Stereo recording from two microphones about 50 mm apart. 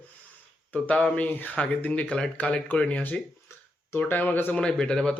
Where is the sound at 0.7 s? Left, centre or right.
Left.